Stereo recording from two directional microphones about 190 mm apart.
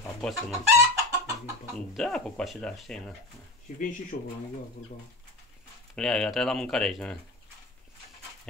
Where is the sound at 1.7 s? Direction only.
Centre (ahead or behind).